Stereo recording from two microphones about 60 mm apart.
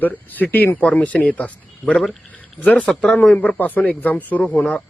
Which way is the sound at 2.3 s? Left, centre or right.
Left.